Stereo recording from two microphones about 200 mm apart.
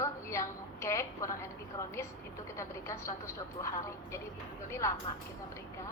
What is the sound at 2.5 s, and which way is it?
A woman's voice, 15° left (ahead or behind).